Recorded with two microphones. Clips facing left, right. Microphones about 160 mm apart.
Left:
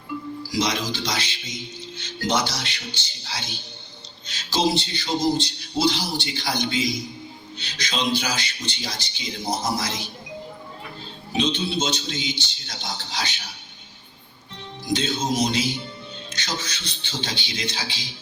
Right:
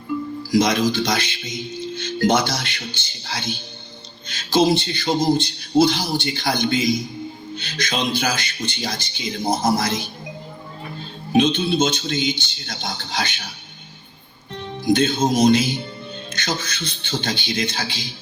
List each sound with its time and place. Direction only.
0.5 s speech: 50° right (ahead or behind)
11.3 s speech: 55° right (ahead or behind)
14.5 s speech: 55° right (ahead or behind)